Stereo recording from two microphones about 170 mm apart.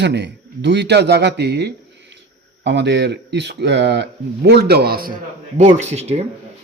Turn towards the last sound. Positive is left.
turn(degrees=-40)  # may be behind; listen again after turning